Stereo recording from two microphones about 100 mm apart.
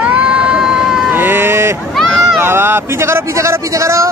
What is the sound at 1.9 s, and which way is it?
Run, centre (ahead or behind).